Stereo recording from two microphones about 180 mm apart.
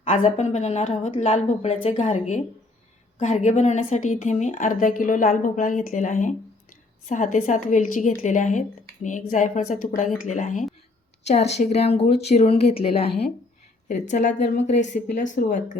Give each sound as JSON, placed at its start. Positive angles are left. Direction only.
{"t": 0.2, "sound": "a woman's voice", "side_deg": 40}